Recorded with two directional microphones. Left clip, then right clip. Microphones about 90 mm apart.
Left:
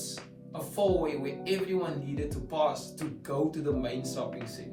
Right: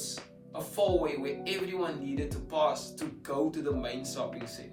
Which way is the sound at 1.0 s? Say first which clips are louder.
Left 1 dB; 30° right (ahead or behind).